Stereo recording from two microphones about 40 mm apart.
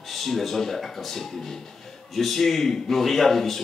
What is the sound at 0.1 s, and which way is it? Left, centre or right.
A man's voice, centre.